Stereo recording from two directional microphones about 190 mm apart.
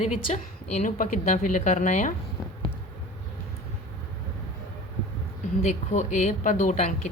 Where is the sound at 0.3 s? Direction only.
40° left (ahead or behind).